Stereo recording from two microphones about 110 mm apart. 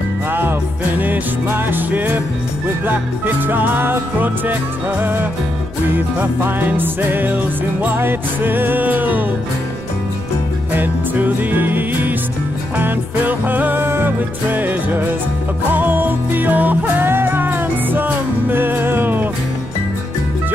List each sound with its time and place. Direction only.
0.3 s music: 20° right (ahead or behind)
10.7 s music: 15° right (ahead or behind)